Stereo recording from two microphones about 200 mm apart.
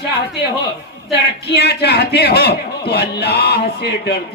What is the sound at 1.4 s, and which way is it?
A man's voice, 55° left (ahead or behind).